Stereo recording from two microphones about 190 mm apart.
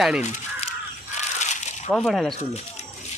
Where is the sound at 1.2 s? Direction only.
35° left (ahead or behind).